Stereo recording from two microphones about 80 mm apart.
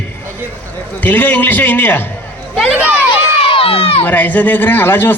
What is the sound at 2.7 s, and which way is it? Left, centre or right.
Speech, right.